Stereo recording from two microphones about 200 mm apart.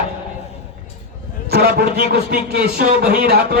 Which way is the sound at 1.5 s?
50° right (ahead or behind).